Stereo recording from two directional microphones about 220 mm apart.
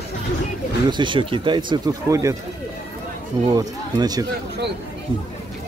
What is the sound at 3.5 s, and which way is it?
Speech, 15° right (ahead or behind).